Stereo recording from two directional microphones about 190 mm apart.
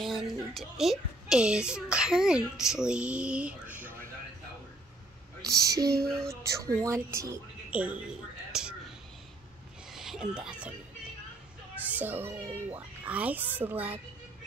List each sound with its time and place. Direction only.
0.0 s a woman's voice: centre (ahead or behind)
5.5 s a child's voice: 15° right (ahead or behind)
9.9 s speech: centre (ahead or behind)
11.9 s a child's voice: 10° right (ahead or behind)